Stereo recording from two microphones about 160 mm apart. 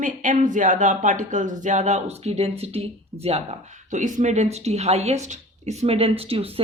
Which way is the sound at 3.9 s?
50° right (ahead or behind).